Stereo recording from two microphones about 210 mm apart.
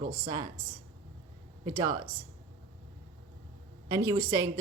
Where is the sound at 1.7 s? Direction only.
20° right (ahead or behind).